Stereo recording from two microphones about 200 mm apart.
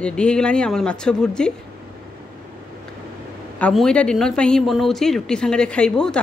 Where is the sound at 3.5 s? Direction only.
5° left (ahead or behind).